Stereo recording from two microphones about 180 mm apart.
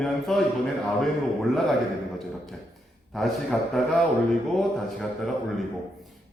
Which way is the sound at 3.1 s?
Centre (ahead or behind).